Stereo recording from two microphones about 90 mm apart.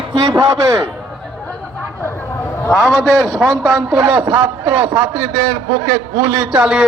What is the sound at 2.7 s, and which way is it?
A man's voice, centre (ahead or behind).